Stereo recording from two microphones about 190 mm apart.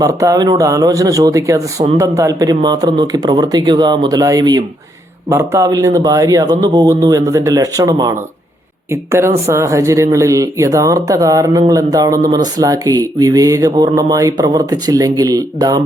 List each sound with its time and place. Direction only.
0.0 s speech: 15° right (ahead or behind)